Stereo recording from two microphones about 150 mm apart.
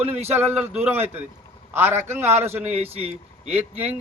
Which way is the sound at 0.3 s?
15° right (ahead or behind).